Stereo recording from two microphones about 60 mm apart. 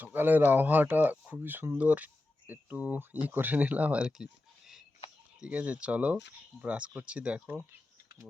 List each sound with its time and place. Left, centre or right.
0.0 s speech: right; by 4.8 s centre
5.4 s speech: right